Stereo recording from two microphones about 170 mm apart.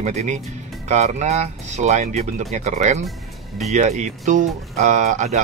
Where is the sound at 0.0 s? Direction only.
40° right (ahead or behind).